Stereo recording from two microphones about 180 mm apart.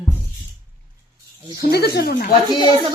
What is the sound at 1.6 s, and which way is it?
Speech, 65° left (ahead or behind).